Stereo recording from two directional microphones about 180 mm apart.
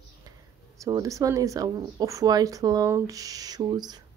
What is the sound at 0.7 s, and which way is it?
Speech, 20° right (ahead or behind).